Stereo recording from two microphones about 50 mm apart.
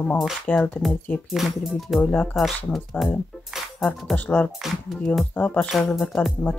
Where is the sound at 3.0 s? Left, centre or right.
Left.